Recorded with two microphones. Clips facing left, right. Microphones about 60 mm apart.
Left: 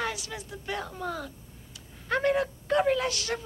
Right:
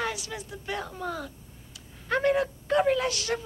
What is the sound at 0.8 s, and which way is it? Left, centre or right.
Speech, centre.